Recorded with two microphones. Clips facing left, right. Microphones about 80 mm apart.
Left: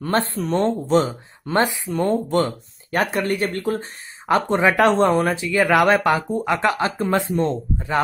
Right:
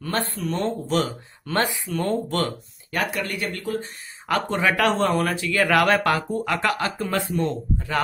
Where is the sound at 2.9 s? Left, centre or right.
Left.